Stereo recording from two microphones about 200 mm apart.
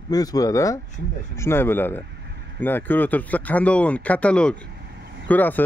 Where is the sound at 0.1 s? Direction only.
20° left (ahead or behind).